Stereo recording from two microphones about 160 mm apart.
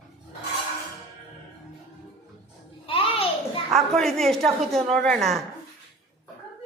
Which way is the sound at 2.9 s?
35° left (ahead or behind).